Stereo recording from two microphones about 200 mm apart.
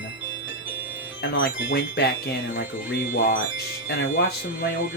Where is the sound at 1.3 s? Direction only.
65° left (ahead or behind).